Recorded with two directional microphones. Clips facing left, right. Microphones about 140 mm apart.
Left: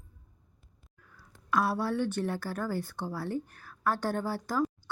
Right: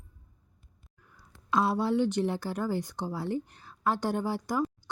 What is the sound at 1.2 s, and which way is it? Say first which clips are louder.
Speech: right 1 dB; 20° right (ahead or behind).